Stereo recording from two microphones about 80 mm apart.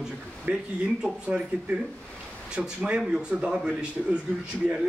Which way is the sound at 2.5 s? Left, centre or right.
Centre.